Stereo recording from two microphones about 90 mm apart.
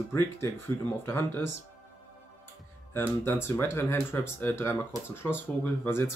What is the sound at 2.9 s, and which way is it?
Speech, 25° left (ahead or behind).